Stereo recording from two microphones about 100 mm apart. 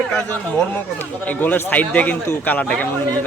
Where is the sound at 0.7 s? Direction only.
20° left (ahead or behind).